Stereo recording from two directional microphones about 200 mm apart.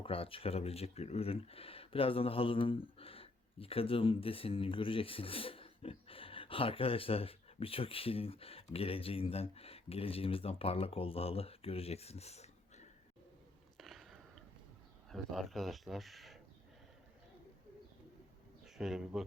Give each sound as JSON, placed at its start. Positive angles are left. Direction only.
{"t": 0.0, "sound": "speech", "side_deg": 25}
{"t": 13.7, "sound": "chewing", "side_deg": 0}
{"t": 15.1, "sound": "speech", "side_deg": 0}
{"t": 18.6, "sound": "speech", "side_deg": 0}